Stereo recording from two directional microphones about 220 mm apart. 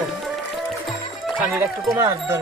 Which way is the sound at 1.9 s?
15° right (ahead or behind).